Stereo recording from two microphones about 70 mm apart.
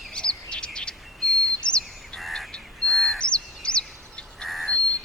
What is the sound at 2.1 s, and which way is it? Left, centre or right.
Bird, centre.